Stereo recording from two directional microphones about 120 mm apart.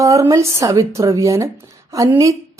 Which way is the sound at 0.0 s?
25° right (ahead or behind).